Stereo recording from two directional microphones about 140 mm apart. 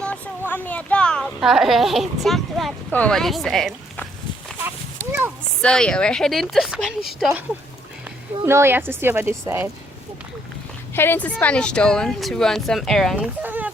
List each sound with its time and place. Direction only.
0.0 s speech: 10° left (ahead or behind)
5.6 s speech: 5° left (ahead or behind)
8.4 s speech: 15° right (ahead or behind)
10.9 s speech: 15° left (ahead or behind); by 13.7 s 10° right (ahead or behind)